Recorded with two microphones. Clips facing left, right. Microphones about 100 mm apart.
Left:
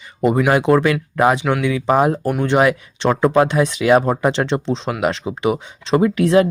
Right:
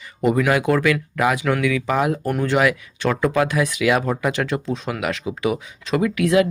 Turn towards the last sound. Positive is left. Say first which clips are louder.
# left 3 dB
turn(degrees=30)  # may be behind; listen again after turning